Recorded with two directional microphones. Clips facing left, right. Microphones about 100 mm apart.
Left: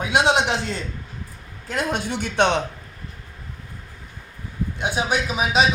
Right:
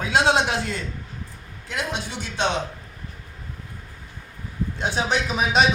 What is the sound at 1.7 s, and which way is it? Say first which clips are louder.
Speech: left 4 dB; 45° left (ahead or behind).